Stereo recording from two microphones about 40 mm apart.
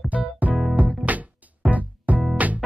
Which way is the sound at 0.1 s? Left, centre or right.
Right.